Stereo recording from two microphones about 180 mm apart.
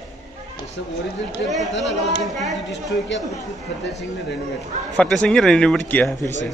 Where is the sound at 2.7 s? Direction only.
80° left.